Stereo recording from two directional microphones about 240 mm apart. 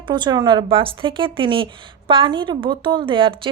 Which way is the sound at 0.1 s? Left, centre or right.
Centre.